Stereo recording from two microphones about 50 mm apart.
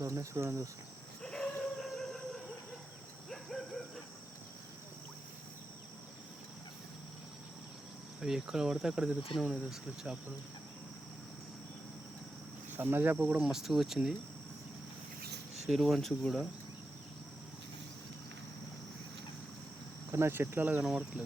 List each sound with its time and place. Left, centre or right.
0.0 s speech: right
1.2 s dog: centre
3.2 s a sound: centre
8.2 s speech: centre
12.7 s speech: right
13.4 s speech: centre
15.7 s speech: centre
16.0 s speech: centre
20.1 s speech: right
20.8 s speech: centre